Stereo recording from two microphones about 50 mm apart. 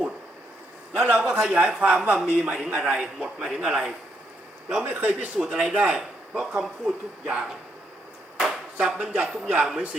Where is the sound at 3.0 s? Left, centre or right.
Centre.